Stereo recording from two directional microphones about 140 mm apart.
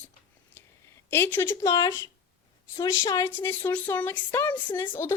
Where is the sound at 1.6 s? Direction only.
25° left (ahead or behind).